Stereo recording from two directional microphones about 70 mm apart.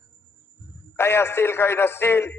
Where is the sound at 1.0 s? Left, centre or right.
Left.